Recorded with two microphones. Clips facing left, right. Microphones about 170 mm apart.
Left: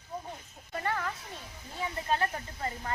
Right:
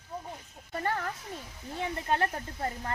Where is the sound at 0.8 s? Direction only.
40° right (ahead or behind).